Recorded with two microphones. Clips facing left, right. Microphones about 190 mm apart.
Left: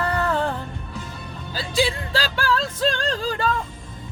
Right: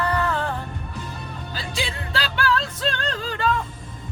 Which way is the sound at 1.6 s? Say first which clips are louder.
Left 8 dB; 40° left (ahead or behind).